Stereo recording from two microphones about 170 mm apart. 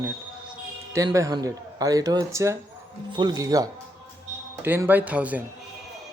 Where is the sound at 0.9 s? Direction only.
20° right (ahead or behind).